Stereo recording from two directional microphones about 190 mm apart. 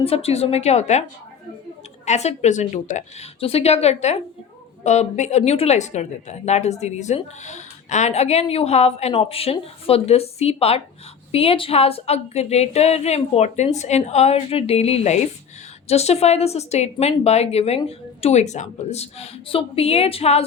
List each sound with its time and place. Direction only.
0.0 s a woman's voice: 30° left (ahead or behind)
2.0 s a woman's voice: 35° left (ahead or behind)